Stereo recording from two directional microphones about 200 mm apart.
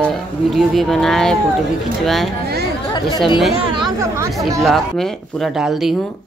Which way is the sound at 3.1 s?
20° left (ahead or behind).